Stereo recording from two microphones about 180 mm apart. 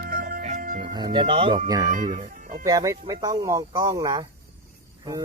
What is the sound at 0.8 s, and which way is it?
Speech, 25° right (ahead or behind).